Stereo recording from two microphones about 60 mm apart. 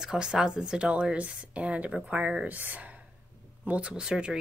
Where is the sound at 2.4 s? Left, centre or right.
Right; by 4.4 s centre.